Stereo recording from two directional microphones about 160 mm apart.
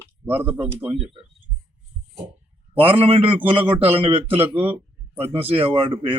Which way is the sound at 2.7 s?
35° right (ahead or behind).